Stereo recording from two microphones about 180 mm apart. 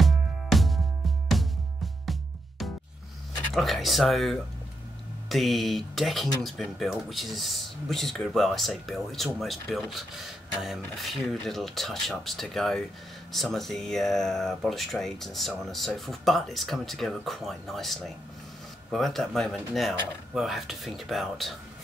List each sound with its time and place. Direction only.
0.0 s music: centre (ahead or behind)
2.6 s music: centre (ahead or behind)
3.5 s speech: centre (ahead or behind)